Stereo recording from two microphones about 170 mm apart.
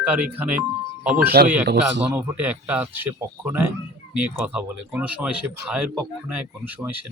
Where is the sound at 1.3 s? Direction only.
65° right (ahead or behind).